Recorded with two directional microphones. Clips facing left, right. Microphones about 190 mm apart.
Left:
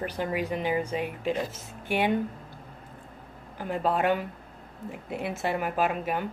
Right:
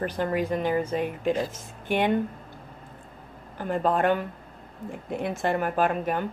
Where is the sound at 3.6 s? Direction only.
5° left (ahead or behind).